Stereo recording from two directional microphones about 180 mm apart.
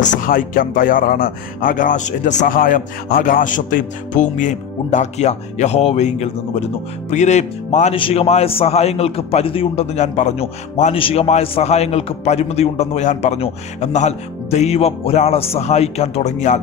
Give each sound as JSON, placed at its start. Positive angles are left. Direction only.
{"t": 0.0, "sound": "a man's voice", "side_deg": 50}